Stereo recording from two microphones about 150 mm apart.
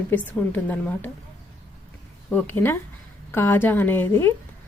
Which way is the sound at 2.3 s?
15° left (ahead or behind).